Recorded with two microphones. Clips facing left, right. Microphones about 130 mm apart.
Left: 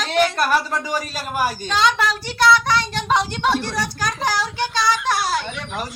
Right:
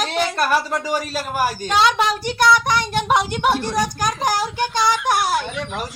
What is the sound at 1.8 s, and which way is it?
Speech, 15° right (ahead or behind).